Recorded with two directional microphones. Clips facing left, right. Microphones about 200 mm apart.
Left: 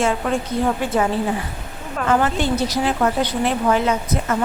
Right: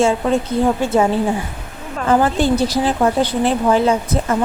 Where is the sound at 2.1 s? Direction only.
30° right (ahead or behind).